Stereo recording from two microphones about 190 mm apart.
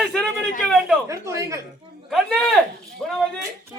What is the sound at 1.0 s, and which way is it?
Speech, 15° right (ahead or behind).